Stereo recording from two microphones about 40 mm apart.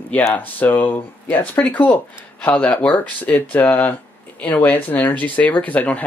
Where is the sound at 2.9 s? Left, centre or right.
Left.